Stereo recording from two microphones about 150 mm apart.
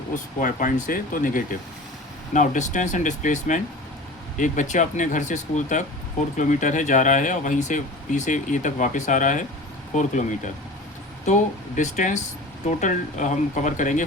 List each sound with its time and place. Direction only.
0.3 s speech: 60° left (ahead or behind)
11.8 s speech: 55° left (ahead or behind)